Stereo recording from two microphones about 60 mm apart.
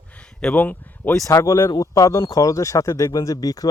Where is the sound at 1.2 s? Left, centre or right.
Left.